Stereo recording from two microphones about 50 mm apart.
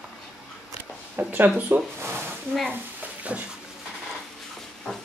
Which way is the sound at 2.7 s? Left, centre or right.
Right.